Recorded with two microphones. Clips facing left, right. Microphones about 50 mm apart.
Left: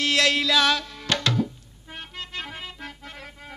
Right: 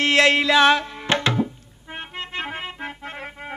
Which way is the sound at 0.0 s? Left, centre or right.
Right.